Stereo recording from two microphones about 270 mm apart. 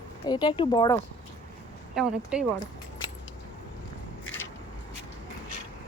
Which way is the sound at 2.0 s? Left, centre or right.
Centre.